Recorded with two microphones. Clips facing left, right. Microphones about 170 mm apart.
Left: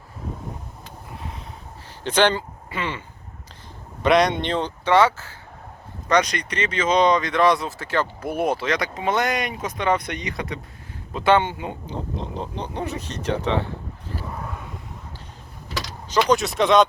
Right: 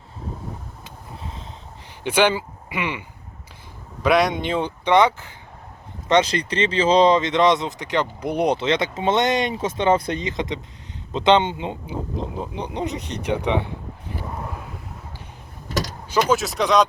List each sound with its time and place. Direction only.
1.2 s a sound: 25° right (ahead or behind)
2.0 s speech: 10° right (ahead or behind)
4.0 s speech: centre (ahead or behind); by 11.8 s 20° right (ahead or behind)
11.9 s speech: 10° right (ahead or behind)
15.7 s mechanisms: 45° right (ahead or behind)
16.3 s speech: centre (ahead or behind)